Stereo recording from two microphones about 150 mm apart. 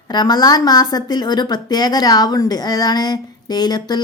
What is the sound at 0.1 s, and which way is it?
A woman's voice, 25° left (ahead or behind).